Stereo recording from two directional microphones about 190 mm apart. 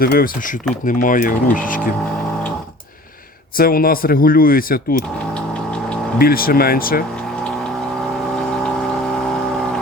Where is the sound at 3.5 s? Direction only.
50° left (ahead or behind).